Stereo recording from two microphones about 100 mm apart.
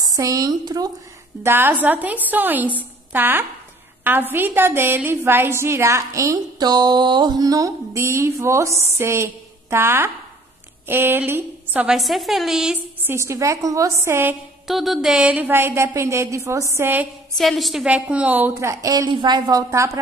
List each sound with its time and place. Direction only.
0.0 s speech: 35° right (ahead or behind)
1.4 s a woman's voice: 20° right (ahead or behind)
6.6 s a woman's voice: 45° right (ahead or behind); by 11.9 s 20° right (ahead or behind)
11.9 s a woman's voice: centre (ahead or behind)
13.0 s a woman's voice: 25° right (ahead or behind)
14.7 s a woman's voice: centre (ahead or behind); by 17.1 s 20° right (ahead or behind)
17.4 s a woman's voice: centre (ahead or behind)
17.8 s a woman's voice: 15° right (ahead or behind); by 19.6 s 45° right (ahead or behind)
19.7 s speech: 30° right (ahead or behind)